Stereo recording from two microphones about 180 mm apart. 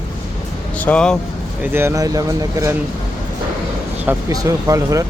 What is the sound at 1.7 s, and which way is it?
Speech, 15° right (ahead or behind).